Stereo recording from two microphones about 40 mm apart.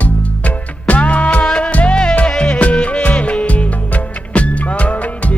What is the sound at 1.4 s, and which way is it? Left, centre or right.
Music, left.